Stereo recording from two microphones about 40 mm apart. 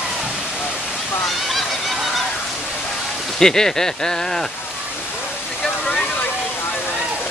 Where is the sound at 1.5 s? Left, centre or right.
Centre.